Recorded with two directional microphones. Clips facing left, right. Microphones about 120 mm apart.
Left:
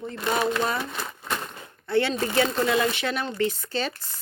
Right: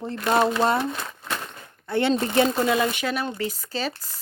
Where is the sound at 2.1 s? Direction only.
25° right (ahead or behind).